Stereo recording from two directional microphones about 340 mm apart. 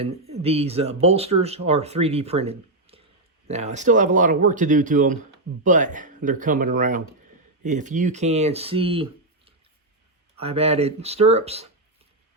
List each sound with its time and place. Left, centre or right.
0.0 s speech: centre